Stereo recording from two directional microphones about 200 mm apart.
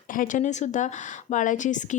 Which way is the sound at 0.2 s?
40° left (ahead or behind).